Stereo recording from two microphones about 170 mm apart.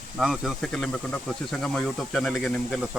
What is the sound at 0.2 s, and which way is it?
Speech, centre (ahead or behind).